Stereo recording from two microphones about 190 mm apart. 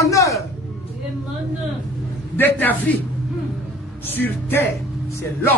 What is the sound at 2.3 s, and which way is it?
Speech, 10° left (ahead or behind).